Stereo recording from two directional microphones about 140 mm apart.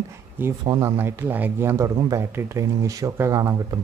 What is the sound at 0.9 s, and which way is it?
Speech, 15° right (ahead or behind).